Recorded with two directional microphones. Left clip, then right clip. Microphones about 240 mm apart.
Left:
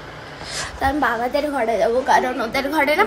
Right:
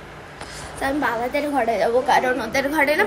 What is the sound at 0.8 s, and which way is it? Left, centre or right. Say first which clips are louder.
A woman's voice: left 2 dB; centre.